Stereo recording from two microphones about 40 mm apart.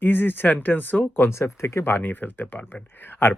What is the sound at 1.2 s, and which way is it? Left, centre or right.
Speech, left.